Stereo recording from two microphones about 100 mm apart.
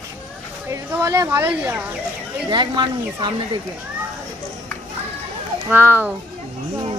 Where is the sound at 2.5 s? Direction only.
50° right (ahead or behind).